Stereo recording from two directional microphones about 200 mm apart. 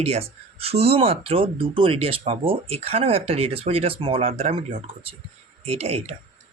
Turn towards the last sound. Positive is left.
turn(degrees=-30)  # may be behind; listen again after turning